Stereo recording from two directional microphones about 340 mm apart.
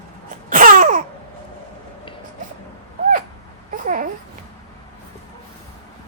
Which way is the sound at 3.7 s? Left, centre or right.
Right.